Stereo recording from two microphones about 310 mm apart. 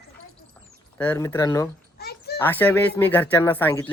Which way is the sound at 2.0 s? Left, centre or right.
Left.